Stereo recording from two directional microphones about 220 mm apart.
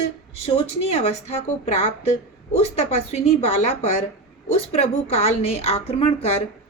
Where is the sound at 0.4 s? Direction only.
25° left (ahead or behind).